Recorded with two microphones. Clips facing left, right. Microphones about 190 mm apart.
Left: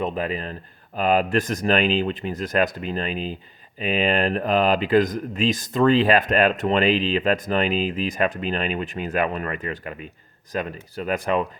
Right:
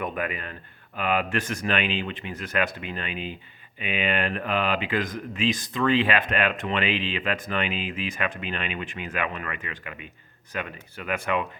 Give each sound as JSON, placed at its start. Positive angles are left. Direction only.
{"t": 0.0, "sound": "speech", "side_deg": 30}